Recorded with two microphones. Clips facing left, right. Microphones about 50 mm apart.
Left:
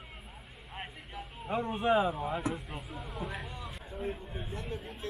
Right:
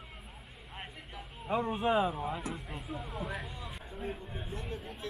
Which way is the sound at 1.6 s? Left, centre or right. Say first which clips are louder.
Left 2 dB; centre.